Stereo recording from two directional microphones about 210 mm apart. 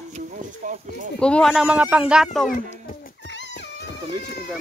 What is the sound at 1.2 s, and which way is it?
Speech, 5° left (ahead or behind).